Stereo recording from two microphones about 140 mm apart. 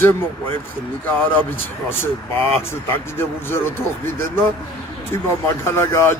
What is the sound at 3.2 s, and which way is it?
Speech, 15° left (ahead or behind).